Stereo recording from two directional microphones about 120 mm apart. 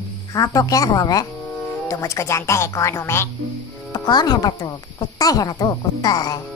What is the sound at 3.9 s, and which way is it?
Speech, 35° left (ahead or behind).